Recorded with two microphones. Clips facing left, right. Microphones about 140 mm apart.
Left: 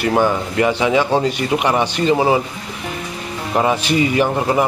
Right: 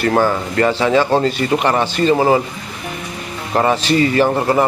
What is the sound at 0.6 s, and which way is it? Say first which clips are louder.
Speech: right 2 dB; 10° left (ahead or behind).